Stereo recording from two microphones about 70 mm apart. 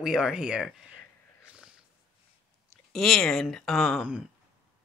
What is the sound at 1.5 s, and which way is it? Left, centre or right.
Sniff, centre.